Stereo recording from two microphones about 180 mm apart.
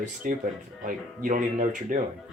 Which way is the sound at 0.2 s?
50° right (ahead or behind).